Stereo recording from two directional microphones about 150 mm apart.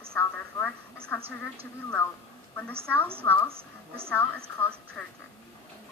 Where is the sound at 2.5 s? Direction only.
10° left (ahead or behind).